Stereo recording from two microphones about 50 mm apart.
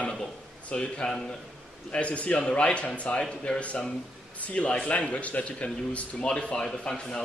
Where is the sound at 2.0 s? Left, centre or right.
Left.